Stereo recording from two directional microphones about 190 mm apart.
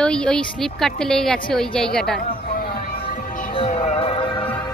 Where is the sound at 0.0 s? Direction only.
5° left (ahead or behind).